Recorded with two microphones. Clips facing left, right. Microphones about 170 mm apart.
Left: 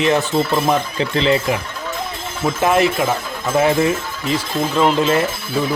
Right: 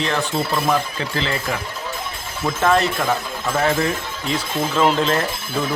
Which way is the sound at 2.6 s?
15° left (ahead or behind).